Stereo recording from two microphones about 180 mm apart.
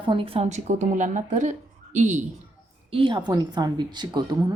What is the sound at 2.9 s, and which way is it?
Speech, 25° right (ahead or behind).